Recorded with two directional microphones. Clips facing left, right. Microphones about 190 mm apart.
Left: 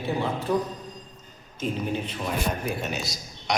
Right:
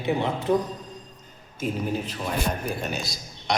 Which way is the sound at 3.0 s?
30° right (ahead or behind).